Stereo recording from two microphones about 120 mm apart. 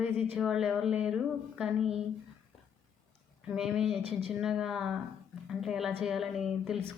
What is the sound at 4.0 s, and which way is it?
Speech, 55° right (ahead or behind).